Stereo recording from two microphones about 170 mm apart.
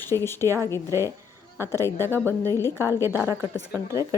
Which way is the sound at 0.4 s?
15° right (ahead or behind).